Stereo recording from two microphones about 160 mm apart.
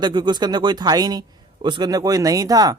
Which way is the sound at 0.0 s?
30° right (ahead or behind).